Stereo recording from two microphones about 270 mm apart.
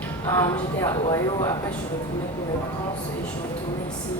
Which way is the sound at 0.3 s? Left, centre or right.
Centre.